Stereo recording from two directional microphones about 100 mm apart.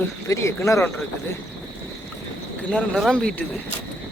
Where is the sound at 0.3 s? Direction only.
30° left (ahead or behind).